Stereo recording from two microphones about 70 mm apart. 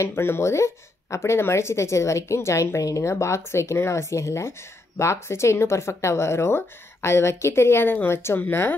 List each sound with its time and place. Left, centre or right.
0.0 s speech: left